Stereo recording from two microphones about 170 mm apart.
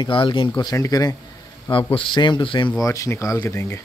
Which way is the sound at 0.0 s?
30° left (ahead or behind).